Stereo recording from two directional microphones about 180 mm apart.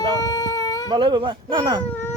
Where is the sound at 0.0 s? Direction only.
20° left (ahead or behind).